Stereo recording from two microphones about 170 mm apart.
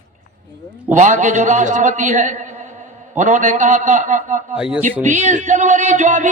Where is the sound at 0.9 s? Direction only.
45° right (ahead or behind).